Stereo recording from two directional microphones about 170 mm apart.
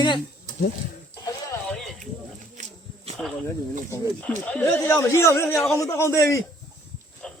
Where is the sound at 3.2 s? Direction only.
5° left (ahead or behind).